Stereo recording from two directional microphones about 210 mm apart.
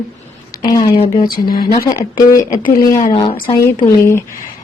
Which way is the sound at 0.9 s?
30° left (ahead or behind).